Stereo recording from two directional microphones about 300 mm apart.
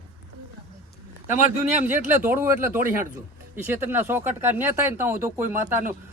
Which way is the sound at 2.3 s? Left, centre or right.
Centre.